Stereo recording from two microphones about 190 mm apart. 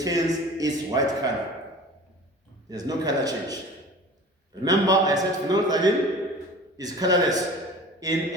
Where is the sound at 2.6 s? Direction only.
20° right (ahead or behind).